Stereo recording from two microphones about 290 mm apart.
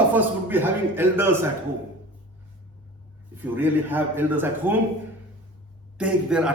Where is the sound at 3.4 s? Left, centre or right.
Centre.